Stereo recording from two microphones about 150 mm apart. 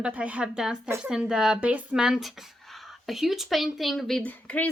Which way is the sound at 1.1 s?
5° right (ahead or behind).